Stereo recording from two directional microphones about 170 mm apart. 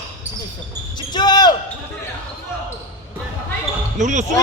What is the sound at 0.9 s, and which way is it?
Basketball bounce, 25° left (ahead or behind).